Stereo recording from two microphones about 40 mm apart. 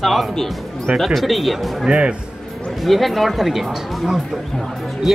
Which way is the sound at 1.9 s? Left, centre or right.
Right.